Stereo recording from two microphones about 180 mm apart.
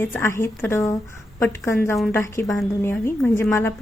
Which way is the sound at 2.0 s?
15° left (ahead or behind).